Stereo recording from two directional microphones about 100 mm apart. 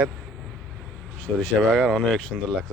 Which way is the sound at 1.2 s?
10° left (ahead or behind).